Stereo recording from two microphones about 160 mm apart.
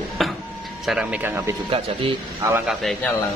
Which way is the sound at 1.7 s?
30° right (ahead or behind).